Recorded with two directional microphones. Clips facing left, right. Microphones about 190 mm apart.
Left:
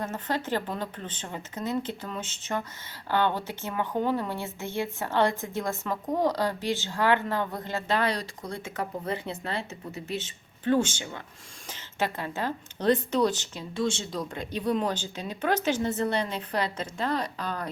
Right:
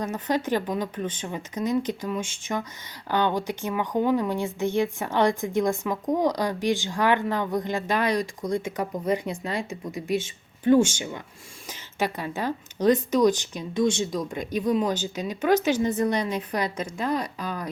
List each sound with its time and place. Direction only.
0.0 s speech: 15° right (ahead or behind)